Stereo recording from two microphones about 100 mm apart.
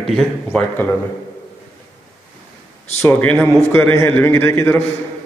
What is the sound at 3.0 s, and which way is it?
A man's voice, 20° left (ahead or behind).